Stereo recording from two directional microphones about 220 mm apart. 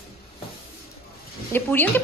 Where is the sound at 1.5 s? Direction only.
10° left (ahead or behind).